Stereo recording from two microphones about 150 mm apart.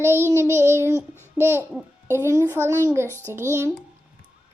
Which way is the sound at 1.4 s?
15° right (ahead or behind).